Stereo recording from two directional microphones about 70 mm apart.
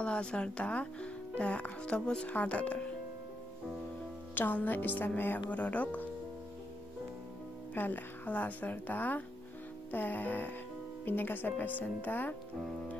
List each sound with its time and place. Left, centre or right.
0.0 s speech: centre
4.4 s speech: left
7.7 s speech: left